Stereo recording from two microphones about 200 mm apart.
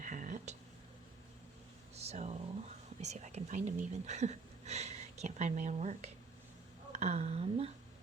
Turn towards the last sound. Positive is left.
turn(degrees=-30)  # may be behind; listen again after turning